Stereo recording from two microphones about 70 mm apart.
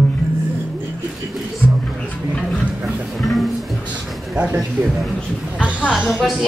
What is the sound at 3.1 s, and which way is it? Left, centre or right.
Music, centre.